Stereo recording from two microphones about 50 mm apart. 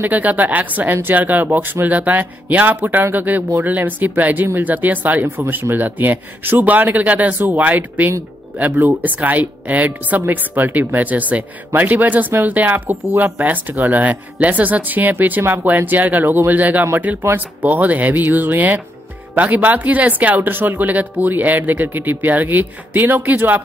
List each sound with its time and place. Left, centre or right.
0.0 s speech: right
5.2 s speech: right